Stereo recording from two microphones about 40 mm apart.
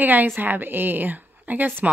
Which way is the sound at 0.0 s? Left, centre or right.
Right.